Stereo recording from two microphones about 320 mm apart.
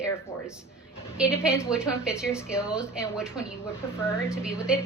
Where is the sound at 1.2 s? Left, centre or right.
Centre.